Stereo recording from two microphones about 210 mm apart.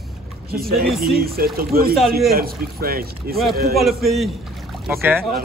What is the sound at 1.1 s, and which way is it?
Speech, 45° right (ahead or behind).